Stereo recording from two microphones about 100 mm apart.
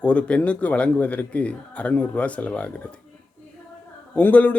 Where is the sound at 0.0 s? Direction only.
15° left (ahead or behind).